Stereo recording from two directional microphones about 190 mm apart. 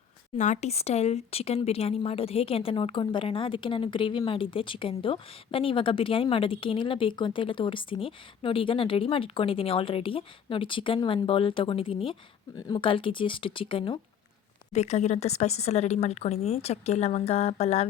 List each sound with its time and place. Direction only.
0.3 s speech: 40° left (ahead or behind)